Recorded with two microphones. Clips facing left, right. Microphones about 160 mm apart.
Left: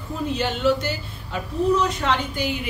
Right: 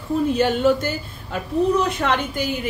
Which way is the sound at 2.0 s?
50° right (ahead or behind).